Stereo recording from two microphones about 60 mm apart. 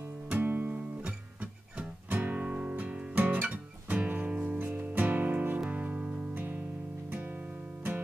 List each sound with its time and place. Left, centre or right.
0.3 s guitar: right
2.0 s music: right
3.3 s guitar: right
4.6 s music: right